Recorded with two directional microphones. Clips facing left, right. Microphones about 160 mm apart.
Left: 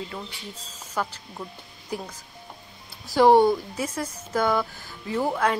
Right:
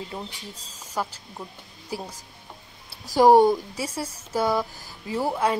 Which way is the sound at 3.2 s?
10° right (ahead or behind).